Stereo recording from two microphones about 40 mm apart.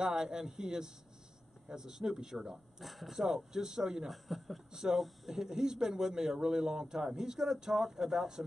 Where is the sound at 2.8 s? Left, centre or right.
Centre.